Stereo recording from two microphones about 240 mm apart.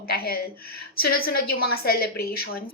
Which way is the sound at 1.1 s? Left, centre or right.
Left.